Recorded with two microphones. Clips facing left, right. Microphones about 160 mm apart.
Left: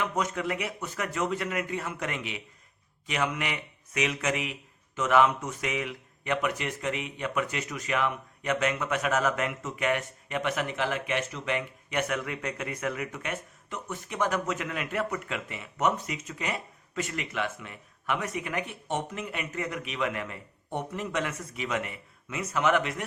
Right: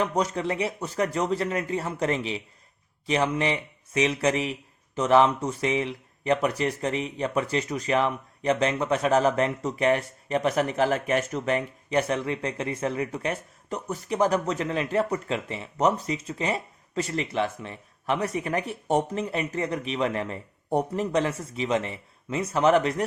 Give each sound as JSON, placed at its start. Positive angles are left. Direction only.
{"t": 0.0, "sound": "a man's voice", "side_deg": -35}